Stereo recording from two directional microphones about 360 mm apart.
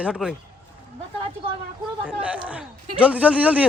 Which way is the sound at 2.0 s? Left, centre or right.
Centre.